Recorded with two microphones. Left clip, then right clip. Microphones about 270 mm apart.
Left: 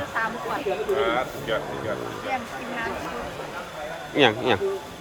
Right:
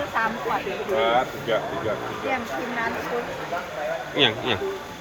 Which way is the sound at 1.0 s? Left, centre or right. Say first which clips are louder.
Right 3 dB; right.